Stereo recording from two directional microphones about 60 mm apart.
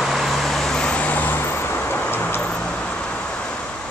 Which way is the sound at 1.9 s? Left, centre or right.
Left.